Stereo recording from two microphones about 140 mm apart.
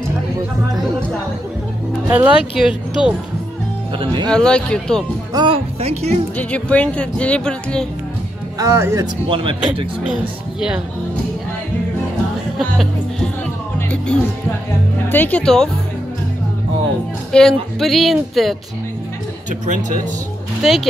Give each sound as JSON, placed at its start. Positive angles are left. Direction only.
{"t": 2.0, "sound": "a woman's voice", "side_deg": -10}
{"t": 4.0, "sound": "speech", "side_deg": -35}
{"t": 4.3, "sound": "a woman's voice", "side_deg": 5}
{"t": 5.3, "sound": "speech", "side_deg": -30}
{"t": 5.8, "sound": "speech", "side_deg": -50}
{"t": 6.3, "sound": "speech", "side_deg": 10}
{"t": 8.5, "sound": "speech", "side_deg": -20}
{"t": 9.3, "sound": "speech", "side_deg": -40}
{"t": 12.5, "sound": "speech", "side_deg": 0}
{"t": 15.0, "sound": "speech", "side_deg": 15}
{"t": 17.3, "sound": "a woman's voice", "side_deg": 5}
{"t": 19.6, "sound": "speech", "side_deg": -65}
{"t": 20.6, "sound": "a woman's voice", "side_deg": 0}